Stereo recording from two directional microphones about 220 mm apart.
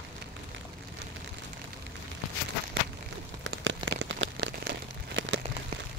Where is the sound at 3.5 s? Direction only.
55° right (ahead or behind).